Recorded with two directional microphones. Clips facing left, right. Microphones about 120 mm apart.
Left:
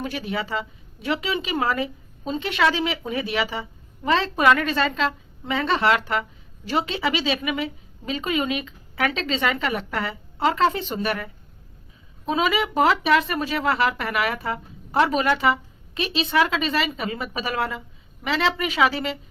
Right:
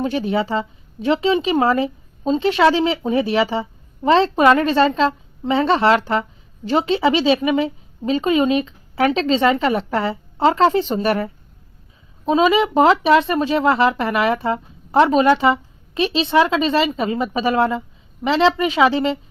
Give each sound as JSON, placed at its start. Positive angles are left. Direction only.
{"t": 0.0, "sound": "speech", "side_deg": -30}